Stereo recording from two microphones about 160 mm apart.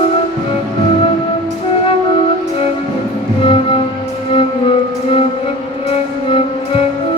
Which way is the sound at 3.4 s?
35° left (ahead or behind).